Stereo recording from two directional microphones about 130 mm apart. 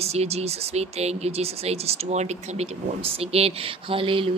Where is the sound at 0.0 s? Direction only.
55° right (ahead or behind).